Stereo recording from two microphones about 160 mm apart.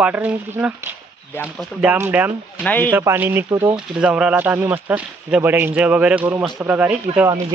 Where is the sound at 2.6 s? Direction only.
10° left (ahead or behind).